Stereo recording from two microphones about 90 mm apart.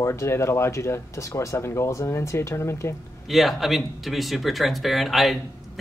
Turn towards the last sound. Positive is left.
turn(degrees=0)  # may be behind; listen again after turning